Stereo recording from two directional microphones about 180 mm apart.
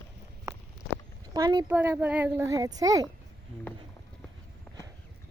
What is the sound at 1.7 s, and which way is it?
A child's voice, 10° right (ahead or behind).